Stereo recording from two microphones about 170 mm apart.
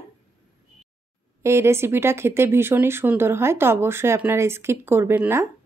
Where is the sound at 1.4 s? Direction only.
15° right (ahead or behind).